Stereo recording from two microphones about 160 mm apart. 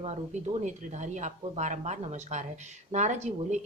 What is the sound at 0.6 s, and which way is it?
Speech, 50° right (ahead or behind).